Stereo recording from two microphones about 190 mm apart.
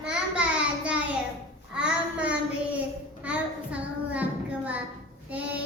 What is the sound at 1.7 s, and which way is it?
Child singing, 5° right (ahead or behind).